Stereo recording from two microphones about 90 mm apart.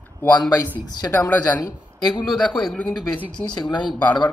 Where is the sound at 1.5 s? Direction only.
45° left (ahead or behind).